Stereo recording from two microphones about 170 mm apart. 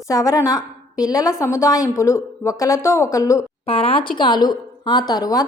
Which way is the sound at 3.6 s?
35° left (ahead or behind).